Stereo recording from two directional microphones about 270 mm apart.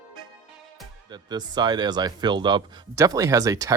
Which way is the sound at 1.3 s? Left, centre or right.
Centre.